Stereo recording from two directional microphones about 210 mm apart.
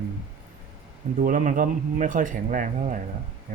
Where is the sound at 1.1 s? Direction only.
40° right (ahead or behind).